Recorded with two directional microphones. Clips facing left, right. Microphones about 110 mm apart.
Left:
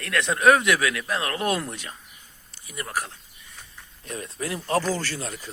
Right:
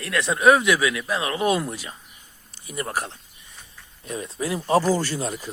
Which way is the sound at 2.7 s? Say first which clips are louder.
Right 3 dB; 30° right (ahead or behind).